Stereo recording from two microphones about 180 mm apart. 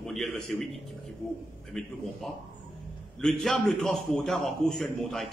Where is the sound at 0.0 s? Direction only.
Centre (ahead or behind).